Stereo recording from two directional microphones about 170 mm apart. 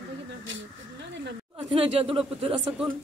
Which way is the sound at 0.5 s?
90° right.